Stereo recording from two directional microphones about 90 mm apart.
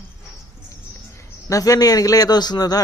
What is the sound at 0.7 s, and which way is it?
A man's voice, 35° left (ahead or behind).